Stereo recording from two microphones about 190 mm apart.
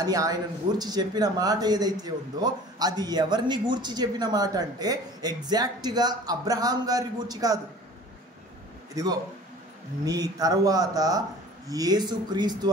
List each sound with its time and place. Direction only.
0.0 s speech: 20° right (ahead or behind)
8.9 s speech: 20° right (ahead or behind)